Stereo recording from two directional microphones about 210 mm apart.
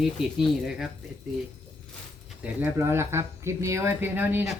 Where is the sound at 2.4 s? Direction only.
10° right (ahead or behind).